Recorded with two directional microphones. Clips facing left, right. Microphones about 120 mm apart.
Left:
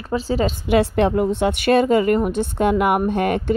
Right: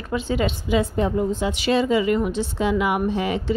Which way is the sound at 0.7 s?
75° left (ahead or behind).